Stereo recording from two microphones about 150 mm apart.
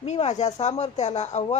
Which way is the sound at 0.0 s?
50° left (ahead or behind).